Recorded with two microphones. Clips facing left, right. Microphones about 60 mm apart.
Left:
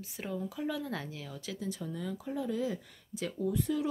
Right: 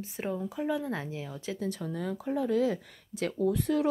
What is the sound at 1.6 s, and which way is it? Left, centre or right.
Speech, right.